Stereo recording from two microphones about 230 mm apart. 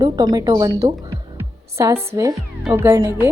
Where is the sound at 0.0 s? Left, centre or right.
Centre.